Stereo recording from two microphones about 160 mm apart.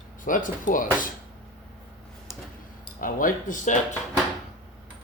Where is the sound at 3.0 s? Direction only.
60° left (ahead or behind).